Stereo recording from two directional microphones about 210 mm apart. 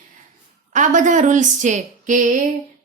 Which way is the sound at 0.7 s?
35° right (ahead or behind).